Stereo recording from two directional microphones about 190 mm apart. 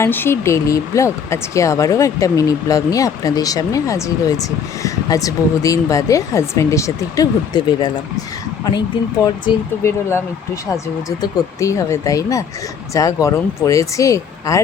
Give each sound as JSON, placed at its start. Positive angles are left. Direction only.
{"t": 0.0, "sound": "speech", "side_deg": 10}
{"t": 8.9, "sound": "speech", "side_deg": 25}
{"t": 9.8, "sound": "speech", "side_deg": 15}